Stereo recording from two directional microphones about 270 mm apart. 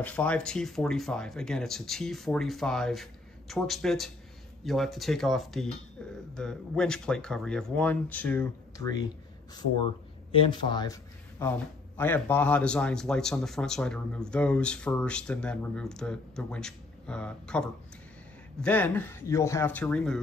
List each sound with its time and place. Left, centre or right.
0.0 s a man's voice: centre
10.3 s a man's voice: centre